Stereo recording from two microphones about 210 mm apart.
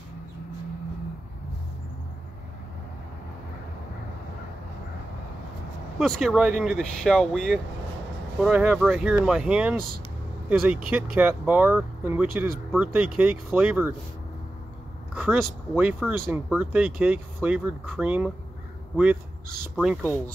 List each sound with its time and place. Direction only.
5.9 s speech: centre (ahead or behind)
10.9 s speech: 10° right (ahead or behind)
15.1 s speech: 10° right (ahead or behind)
19.7 s speech: 5° right (ahead or behind)